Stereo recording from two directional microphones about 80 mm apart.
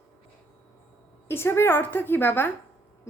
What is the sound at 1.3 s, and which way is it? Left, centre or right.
A woman's voice, left.